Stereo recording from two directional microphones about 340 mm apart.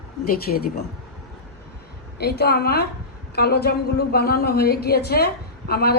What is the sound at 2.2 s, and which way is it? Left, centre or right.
A woman's voice, left.